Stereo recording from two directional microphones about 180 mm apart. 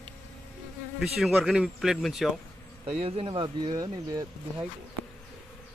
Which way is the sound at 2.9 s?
35° right (ahead or behind).